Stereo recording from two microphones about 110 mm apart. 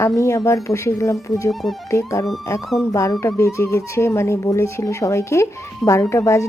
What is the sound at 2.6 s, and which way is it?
Music, centre (ahead or behind).